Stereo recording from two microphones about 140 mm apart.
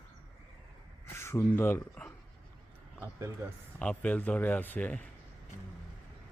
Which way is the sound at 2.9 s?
20° right (ahead or behind).